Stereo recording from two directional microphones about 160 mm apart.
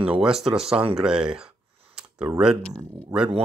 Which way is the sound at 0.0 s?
5° right (ahead or behind).